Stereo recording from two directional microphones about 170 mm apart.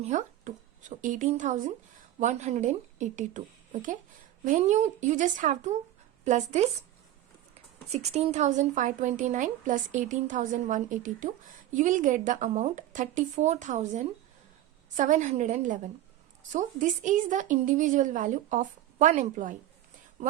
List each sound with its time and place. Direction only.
0.0 s a woman's voice: 45° right (ahead or behind)
7.9 s a woman's voice: 40° right (ahead or behind)